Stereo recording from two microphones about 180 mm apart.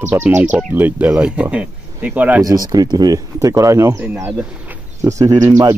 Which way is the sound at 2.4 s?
20° right (ahead or behind).